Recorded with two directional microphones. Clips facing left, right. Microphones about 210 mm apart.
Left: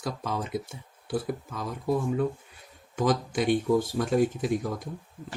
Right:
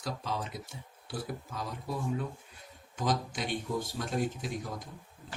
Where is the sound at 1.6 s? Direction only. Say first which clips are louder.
Left 9 dB; 55° left (ahead or behind).